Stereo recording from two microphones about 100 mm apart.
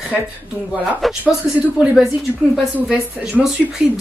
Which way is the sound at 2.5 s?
5° right (ahead or behind).